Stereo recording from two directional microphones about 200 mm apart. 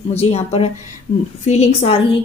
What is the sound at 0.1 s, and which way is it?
A woman's voice, 30° left (ahead or behind).